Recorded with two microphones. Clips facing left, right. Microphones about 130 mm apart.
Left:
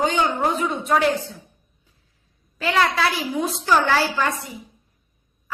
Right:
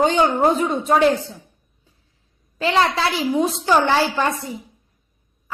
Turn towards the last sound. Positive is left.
turn(degrees=-25)  # may be behind; listen again after turning